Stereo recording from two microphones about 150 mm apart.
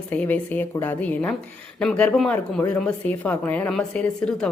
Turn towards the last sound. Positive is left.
turn(degrees=5)  # may be behind; listen again after turning